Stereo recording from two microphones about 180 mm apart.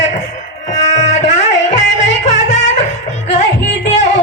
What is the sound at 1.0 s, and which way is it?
Music, 40° left (ahead or behind).